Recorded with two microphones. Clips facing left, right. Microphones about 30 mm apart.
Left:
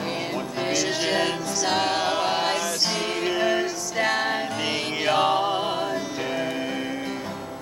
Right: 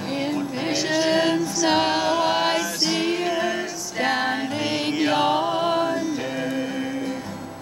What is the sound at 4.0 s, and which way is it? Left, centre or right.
Music, centre.